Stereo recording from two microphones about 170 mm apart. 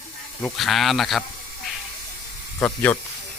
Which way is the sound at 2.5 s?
10° left (ahead or behind).